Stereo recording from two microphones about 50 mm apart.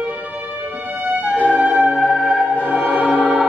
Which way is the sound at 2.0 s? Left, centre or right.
Centre.